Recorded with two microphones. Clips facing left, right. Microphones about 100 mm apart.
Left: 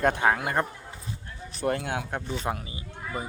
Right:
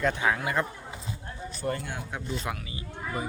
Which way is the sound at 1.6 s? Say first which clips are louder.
Left 5 dB; 75° left (ahead or behind).